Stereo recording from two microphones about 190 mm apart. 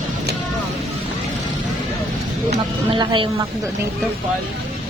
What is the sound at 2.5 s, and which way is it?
Speech, 25° right (ahead or behind).